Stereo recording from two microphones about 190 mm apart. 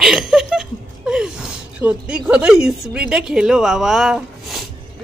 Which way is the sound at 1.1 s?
5° right (ahead or behind).